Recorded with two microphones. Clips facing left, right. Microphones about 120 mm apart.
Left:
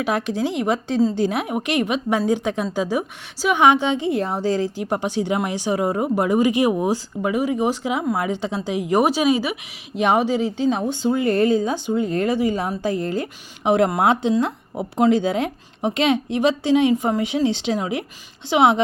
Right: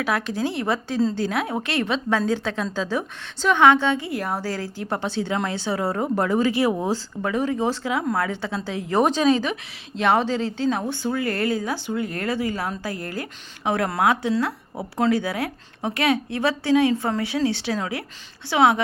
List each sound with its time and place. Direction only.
0.0 s a woman's voice: 20° left (ahead or behind)